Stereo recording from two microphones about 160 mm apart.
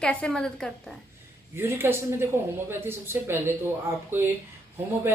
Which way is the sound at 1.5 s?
15° right (ahead or behind).